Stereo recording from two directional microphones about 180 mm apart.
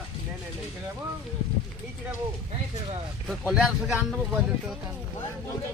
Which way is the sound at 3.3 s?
5° right (ahead or behind).